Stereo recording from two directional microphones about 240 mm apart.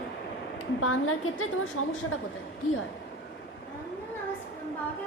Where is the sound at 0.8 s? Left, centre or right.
Left.